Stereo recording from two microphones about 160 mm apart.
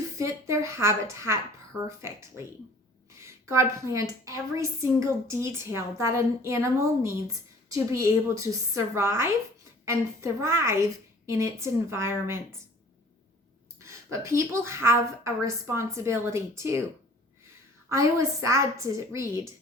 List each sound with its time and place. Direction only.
0.2 s a woman's voice: 20° right (ahead or behind)
13.7 s a woman's voice: 20° right (ahead or behind)
17.8 s a woman's voice: 20° right (ahead or behind)